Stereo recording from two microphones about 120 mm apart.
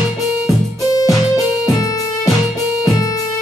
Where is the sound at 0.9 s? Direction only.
30° left (ahead or behind).